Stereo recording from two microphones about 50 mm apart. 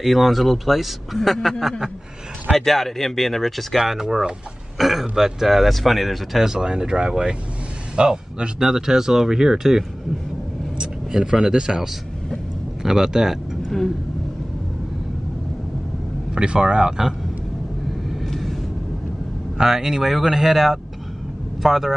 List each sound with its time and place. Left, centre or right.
0.0 s speech: centre
2.5 s speech: centre
16.3 s speech: centre
18.2 s vehicle: centre
19.6 s speech: centre